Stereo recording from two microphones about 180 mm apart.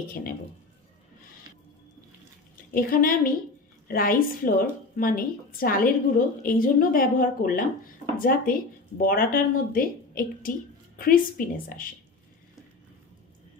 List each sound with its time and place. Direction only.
0.0 s speech: 55° left (ahead or behind)
2.7 s speech: 50° left (ahead or behind)